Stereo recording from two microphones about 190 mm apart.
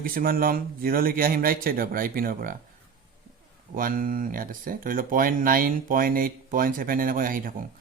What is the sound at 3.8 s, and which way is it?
Speech, 45° right (ahead or behind).